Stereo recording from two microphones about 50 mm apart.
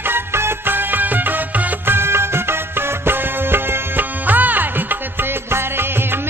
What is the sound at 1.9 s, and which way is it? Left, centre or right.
Music, right.